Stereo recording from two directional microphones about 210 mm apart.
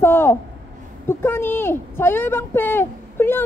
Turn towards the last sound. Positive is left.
turn(degrees=10)  # may be behind; listen again after turning